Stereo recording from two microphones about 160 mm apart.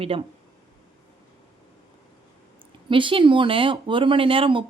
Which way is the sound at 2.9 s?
30° right (ahead or behind).